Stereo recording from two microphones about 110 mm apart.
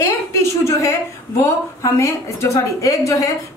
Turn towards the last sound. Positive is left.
turn(degrees=30)  # may be behind; listen again after turning